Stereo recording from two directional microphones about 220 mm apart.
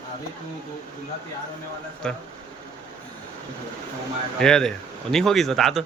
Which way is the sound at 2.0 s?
Centre (ahead or behind).